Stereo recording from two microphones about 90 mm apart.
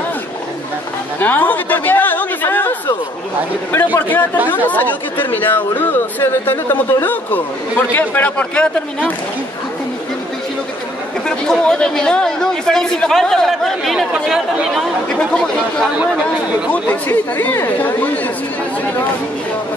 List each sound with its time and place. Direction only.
1.2 s speech: 20° left (ahead or behind)
3.7 s speech: 20° left (ahead or behind)
11.2 s speech: 10° left (ahead or behind)
16.7 s speech: 20° left (ahead or behind)